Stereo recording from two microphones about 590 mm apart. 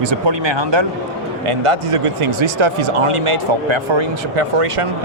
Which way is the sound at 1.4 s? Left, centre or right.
Right.